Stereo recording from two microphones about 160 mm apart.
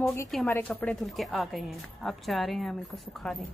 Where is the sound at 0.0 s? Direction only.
15° left (ahead or behind); by 3.4 s centre (ahead or behind).